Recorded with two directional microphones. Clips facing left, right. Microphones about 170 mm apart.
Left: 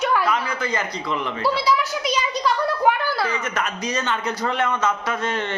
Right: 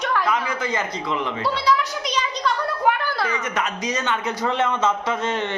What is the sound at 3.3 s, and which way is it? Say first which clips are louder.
A man's voice: even; 20° right (ahead or behind).